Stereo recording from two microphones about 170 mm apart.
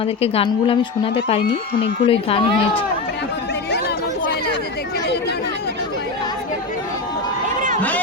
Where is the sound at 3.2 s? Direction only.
85° left.